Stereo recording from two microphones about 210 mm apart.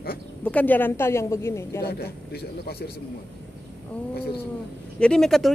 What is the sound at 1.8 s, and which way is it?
A man's voice, 50° left (ahead or behind).